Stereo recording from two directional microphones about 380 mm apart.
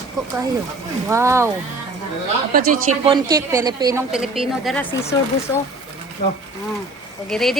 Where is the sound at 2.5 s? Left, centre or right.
Right.